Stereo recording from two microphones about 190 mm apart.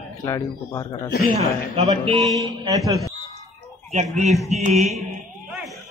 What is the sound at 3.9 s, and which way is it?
Speech, 35° right (ahead or behind).